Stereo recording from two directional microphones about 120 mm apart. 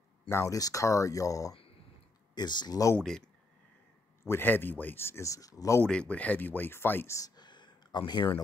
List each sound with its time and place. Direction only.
0.3 s speech: 25° left (ahead or behind)
3.0 s speech: 5° left (ahead or behind)
4.2 s speech: 20° left (ahead or behind)
5.9 s speech: 10° left (ahead or behind); by 8.3 s 35° left (ahead or behind)